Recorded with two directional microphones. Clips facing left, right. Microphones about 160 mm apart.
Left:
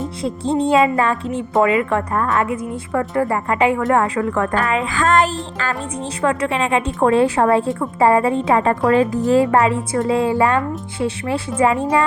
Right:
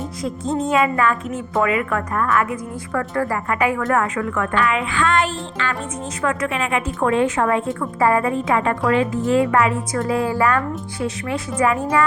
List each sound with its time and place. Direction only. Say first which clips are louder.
0.2 s a woman's voice: left 3 dB; 30° left (ahead or behind)
6.2 s a woman's voice: left 3 dB; 30° left (ahead or behind)